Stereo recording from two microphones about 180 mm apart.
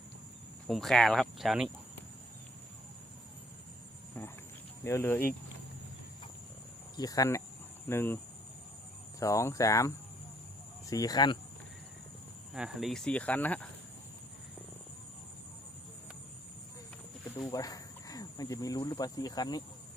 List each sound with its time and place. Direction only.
0.7 s speech: centre (ahead or behind)
4.8 s speech: 15° left (ahead or behind)
6.9 s cricket: 20° left (ahead or behind)
7.9 s speech: 15° left (ahead or behind)
9.2 s speech: 15° left (ahead or behind)
10.8 s cricket: 20° left (ahead or behind)
12.5 s speech: centre (ahead or behind)
17.5 s speech: 20° left (ahead or behind)